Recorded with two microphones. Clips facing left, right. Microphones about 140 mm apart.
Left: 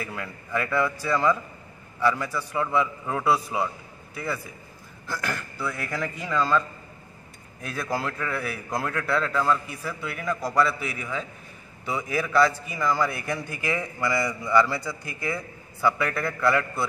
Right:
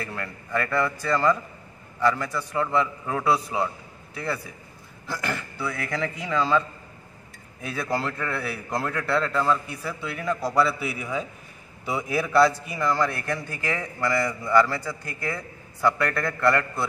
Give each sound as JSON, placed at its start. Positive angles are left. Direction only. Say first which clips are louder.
{"t": 0.0, "sound": "a man's voice", "louder": "right 1 dB", "side_deg": 5}
{"t": 7.6, "sound": "a man's voice", "louder": "right 1 dB", "side_deg": 0}